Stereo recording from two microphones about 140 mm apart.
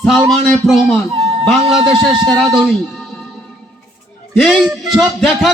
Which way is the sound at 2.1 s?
30° right (ahead or behind).